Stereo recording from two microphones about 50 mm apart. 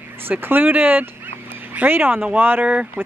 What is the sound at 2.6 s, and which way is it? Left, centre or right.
Speech, right.